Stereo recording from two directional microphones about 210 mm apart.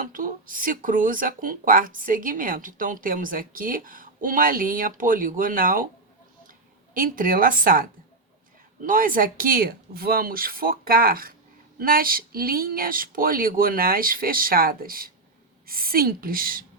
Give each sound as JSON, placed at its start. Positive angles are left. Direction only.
{"t": 0.0, "sound": "speech", "side_deg": -40}